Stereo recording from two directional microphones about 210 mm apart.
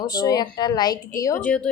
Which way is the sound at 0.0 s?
20° left (ahead or behind).